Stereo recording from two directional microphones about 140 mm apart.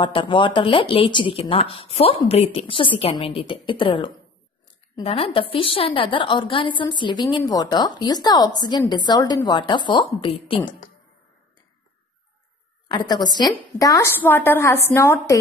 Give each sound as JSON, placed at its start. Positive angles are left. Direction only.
{"t": 0.0, "sound": "a woman's voice", "side_deg": 35}
{"t": 12.8, "sound": "a woman's voice", "side_deg": 30}